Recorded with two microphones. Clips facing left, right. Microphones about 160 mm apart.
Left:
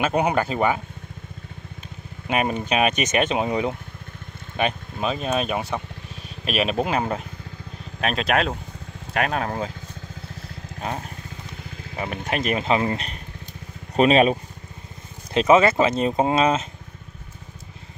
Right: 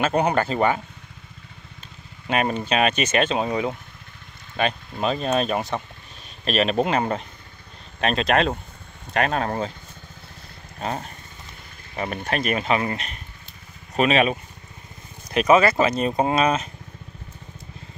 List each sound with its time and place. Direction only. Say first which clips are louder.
0.0 s speech: even; 10° left (ahead or behind)
2.2 s speech: even; 10° left (ahead or behind)
4.9 s speech: right 4 dB; 5° left (ahead or behind)
10.8 s speech: right 1 dB; centre (ahead or behind)
12.3 s speech: left 1 dB; 20° left (ahead or behind)